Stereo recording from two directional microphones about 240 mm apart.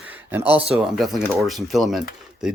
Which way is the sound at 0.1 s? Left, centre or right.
Centre.